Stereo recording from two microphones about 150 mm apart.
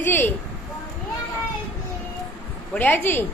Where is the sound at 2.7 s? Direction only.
10° left (ahead or behind).